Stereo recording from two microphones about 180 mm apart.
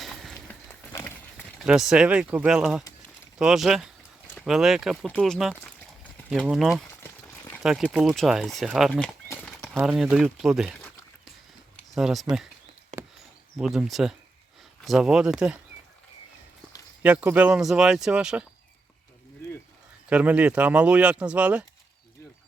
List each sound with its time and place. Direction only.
0.0 s a sound: centre (ahead or behind)
0.9 s run: 10° left (ahead or behind)
1.6 s speech: 5° right (ahead or behind)
7.0 s a sound: 10° left (ahead or behind)
7.6 s speech: 5° right (ahead or behind)
9.7 s speech: 5° right (ahead or behind)
11.9 s speech: centre (ahead or behind)
12.9 s a sound: 40° right (ahead or behind)
13.6 s speech: centre (ahead or behind)
17.0 s speech: 10° right (ahead or behind)
20.1 s speech: 5° right (ahead or behind)